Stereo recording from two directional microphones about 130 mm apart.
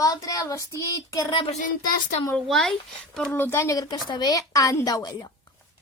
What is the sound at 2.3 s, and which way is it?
Speech, 5° left (ahead or behind).